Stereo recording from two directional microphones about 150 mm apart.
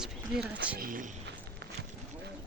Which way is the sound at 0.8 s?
65° right (ahead or behind).